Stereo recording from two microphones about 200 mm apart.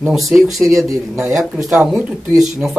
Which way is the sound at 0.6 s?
15° right (ahead or behind).